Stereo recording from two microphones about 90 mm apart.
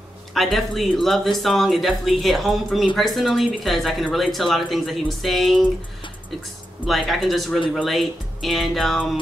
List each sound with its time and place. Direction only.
0.3 s speech: centre (ahead or behind)
6.9 s speech: centre (ahead or behind)